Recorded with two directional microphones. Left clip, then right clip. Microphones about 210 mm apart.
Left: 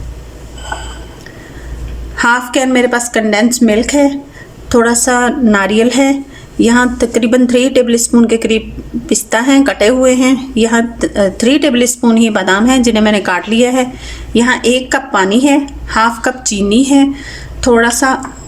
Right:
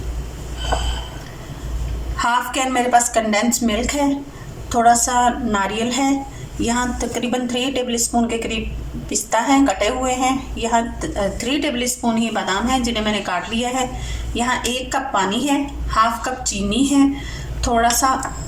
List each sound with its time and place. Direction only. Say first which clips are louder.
2.1 s a woman's voice: left 8 dB; 45° left (ahead or behind)